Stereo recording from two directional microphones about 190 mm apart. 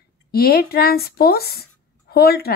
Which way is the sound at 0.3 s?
55° left (ahead or behind).